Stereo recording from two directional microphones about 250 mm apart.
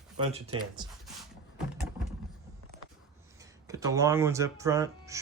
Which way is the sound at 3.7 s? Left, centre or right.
Centre.